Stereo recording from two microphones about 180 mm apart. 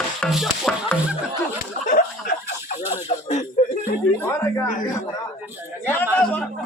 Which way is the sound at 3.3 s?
45° left (ahead or behind).